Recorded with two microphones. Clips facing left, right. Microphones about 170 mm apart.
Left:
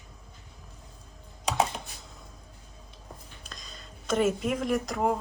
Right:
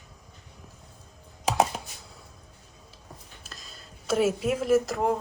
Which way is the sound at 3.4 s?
5° right (ahead or behind).